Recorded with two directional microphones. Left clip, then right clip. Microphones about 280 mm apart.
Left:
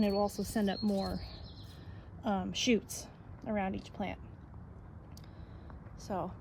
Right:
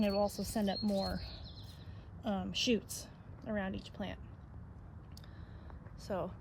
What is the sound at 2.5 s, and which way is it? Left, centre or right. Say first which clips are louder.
Speech: even; centre.